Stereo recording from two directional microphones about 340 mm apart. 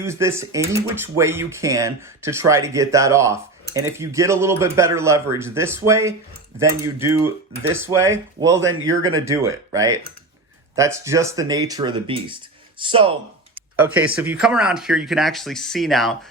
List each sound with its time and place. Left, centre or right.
0.0 s speech: centre
8.5 s speech: right
9.1 s speech: centre
13.7 s speech: centre